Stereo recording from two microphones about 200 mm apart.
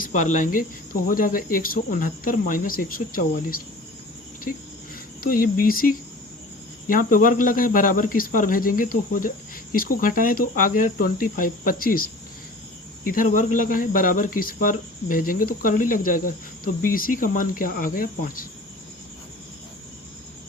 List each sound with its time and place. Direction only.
0.0 s cricket: 40° left (ahead or behind)
1.0 s speech: 45° left (ahead or behind)
5.2 s speech: 45° left (ahead or behind)
13.1 s speech: 45° left (ahead or behind)